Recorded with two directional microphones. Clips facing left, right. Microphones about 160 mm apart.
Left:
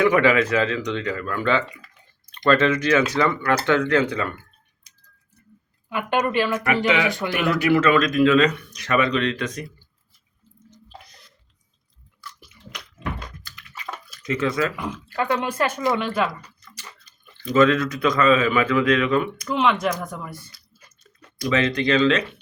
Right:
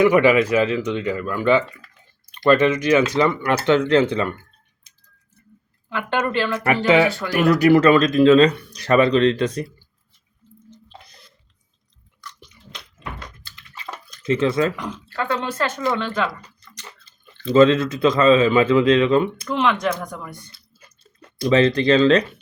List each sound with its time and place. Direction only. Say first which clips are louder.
0.0 s speech: right 3 dB; 10° right (ahead or behind)
5.9 s speech: even; 15° left (ahead or behind)
6.7 s speech: right 4 dB; 35° right (ahead or behind)
13.4 s bathtub: left 1 dB; 30° right (ahead or behind)
14.2 s speech: right 4 dB; 30° right (ahead or behind)
15.1 s speech: left 1 dB; 15° left (ahead or behind)
17.4 s speech: right 4 dB; 25° right (ahead or behind)
19.5 s speech: right 1 dB; 5° left (ahead or behind)
20.5 s chewing: right 3 dB; 30° right (ahead or behind)